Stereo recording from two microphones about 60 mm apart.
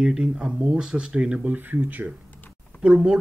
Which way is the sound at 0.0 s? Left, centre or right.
Centre.